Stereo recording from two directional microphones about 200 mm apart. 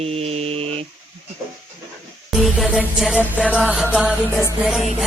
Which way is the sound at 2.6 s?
Centre (ahead or behind).